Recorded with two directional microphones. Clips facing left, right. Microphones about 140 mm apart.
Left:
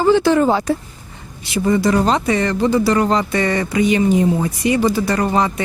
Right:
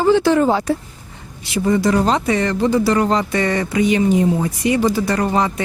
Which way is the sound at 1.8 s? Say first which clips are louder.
Even; 15° left (ahead or behind).